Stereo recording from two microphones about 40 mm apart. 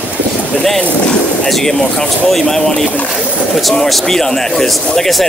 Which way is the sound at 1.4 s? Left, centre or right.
Centre.